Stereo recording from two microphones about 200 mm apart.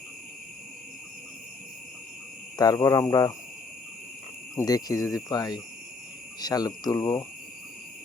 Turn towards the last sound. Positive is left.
turn(degrees=15)  # may be behind; listen again after turning